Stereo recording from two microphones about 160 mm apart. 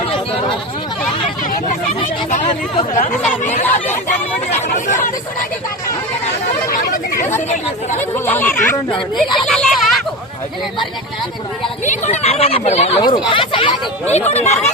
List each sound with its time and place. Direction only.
2.3 s speech: 50° left (ahead or behind)
6.7 s a sound: 65° left (ahead or behind)
7.9 s speech: 15° left (ahead or behind)
9.0 s speech: centre (ahead or behind)
11.9 s speech: 45° left (ahead or behind)
14.1 s speech: 40° left (ahead or behind)